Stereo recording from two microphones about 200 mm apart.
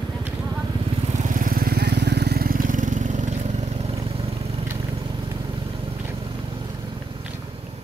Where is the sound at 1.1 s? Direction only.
40° right (ahead or behind).